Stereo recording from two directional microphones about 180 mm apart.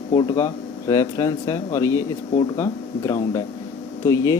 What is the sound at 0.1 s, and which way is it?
Speech, 20° left (ahead or behind).